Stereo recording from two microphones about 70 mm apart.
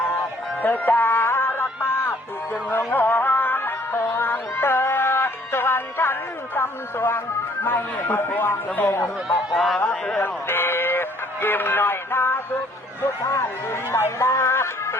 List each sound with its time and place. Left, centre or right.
0.6 s music: left
7.6 s a man's voice: left
9.5 s speech: centre
9.7 s a man's voice: centre
10.2 s a sound: left
13.2 s speech: left